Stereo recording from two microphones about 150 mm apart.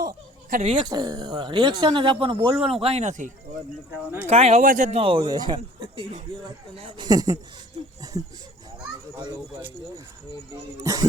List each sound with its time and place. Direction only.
0.6 s speech: 35° right (ahead or behind)
2.6 s speech: 5° right (ahead or behind)
2.8 s speech: 50° right (ahead or behind)
4.6 s a man's voice: 65° right (ahead or behind)
4.9 s speech: 40° right (ahead or behind)
7.1 s speech: 25° right (ahead or behind)
10.5 s speech: 20° right (ahead or behind)